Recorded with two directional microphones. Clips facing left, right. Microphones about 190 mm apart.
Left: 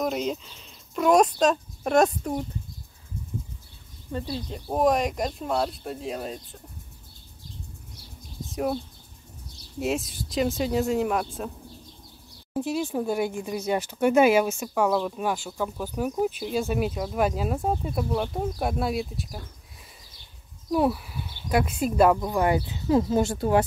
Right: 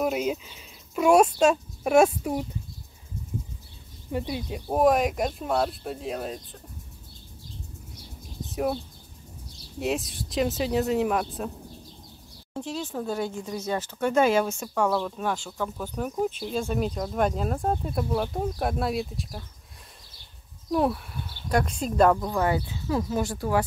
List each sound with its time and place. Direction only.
0.0 s speech: 5° right (ahead or behind)
4.1 s speech: 10° right (ahead or behind)
9.8 s speech: centre (ahead or behind)
12.5 s speech: 10° left (ahead or behind)
20.7 s speech: centre (ahead or behind)
22.8 s speech: 25° left (ahead or behind)